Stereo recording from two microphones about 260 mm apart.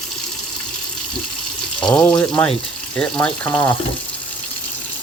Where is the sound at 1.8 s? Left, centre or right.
Centre.